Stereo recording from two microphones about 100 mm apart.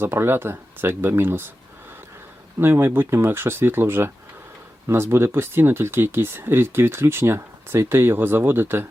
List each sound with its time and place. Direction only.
0.0 s speech: 25° right (ahead or behind)
2.6 s speech: 25° right (ahead or behind)